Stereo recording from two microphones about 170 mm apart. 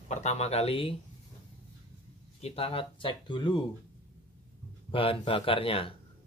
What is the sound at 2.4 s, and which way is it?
Speech, 35° left (ahead or behind).